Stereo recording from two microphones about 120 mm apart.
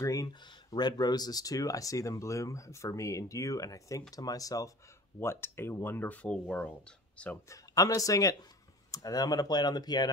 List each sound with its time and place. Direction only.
0.0 s speech: 30° left (ahead or behind); by 6.4 s 10° left (ahead or behind)
7.4 s speech: 30° left (ahead or behind)